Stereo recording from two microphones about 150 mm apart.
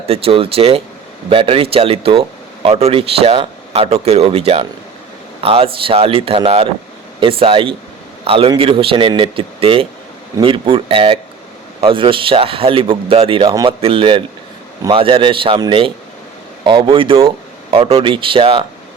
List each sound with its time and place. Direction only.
0.1 s speech: 40° right (ahead or behind)
13.5 s speech: 25° right (ahead or behind)
13.8 s speech: 35° right (ahead or behind)